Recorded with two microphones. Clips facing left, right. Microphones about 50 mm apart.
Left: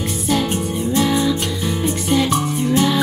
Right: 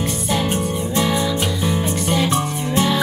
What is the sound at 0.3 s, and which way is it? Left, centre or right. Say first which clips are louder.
Music: left 2 dB; centre.